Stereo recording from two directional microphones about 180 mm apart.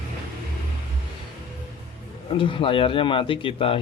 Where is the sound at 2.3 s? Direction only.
30° left (ahead or behind).